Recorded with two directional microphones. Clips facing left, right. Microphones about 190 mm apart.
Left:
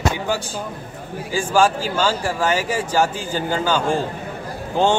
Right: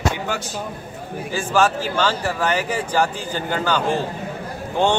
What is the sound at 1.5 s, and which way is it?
Speech, 10° left (ahead or behind).